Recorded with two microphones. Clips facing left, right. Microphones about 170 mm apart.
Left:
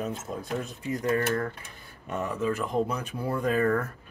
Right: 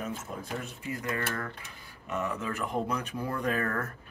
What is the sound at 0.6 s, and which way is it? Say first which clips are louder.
Speech: left 7 dB; 35° left (ahead or behind).